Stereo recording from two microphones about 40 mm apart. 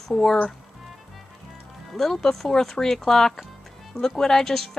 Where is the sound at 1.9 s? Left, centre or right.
Centre.